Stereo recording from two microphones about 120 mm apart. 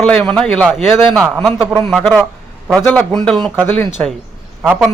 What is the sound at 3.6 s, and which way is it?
Speech, 15° left (ahead or behind).